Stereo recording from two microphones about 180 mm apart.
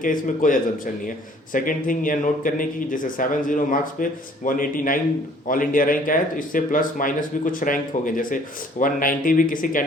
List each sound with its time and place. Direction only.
0.0 s speech: 50° left (ahead or behind)